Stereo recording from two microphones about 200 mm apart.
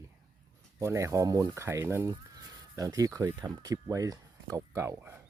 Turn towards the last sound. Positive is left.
turn(degrees=-15)  # may be behind; listen again after turning